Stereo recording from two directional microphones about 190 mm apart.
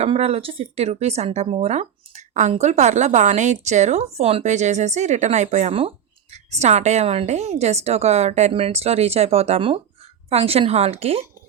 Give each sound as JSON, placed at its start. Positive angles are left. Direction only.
{"t": 0.0, "sound": "speech", "side_deg": -35}